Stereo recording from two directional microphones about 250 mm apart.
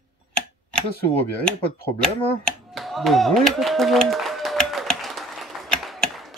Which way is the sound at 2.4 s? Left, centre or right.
Centre.